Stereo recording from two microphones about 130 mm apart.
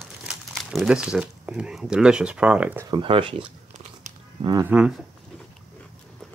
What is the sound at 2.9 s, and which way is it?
Speech, 45° right (ahead or behind).